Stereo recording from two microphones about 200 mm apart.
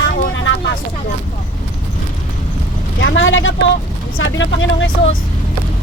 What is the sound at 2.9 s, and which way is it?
Speech, 65° left (ahead or behind).